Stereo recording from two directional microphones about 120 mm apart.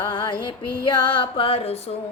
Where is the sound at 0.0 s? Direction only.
40° left (ahead or behind); by 2.0 s 60° left (ahead or behind).